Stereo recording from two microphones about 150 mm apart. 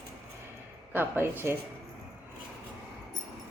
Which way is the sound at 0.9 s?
15° right (ahead or behind).